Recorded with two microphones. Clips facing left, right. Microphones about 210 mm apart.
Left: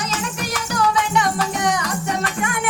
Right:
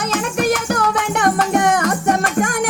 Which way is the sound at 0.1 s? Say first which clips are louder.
Right 8 dB; 55° right (ahead or behind).